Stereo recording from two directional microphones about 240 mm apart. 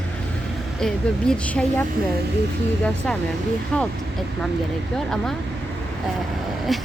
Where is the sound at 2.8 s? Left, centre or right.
Centre.